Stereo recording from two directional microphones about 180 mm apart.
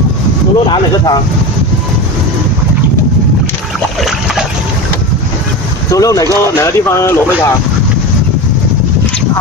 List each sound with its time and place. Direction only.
5.9 s speech: 20° left (ahead or behind)